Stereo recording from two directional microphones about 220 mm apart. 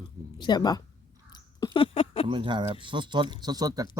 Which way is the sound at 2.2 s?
20° right (ahead or behind).